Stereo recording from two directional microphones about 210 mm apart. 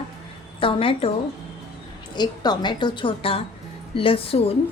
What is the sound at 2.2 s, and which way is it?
A woman's voice, 20° left (ahead or behind).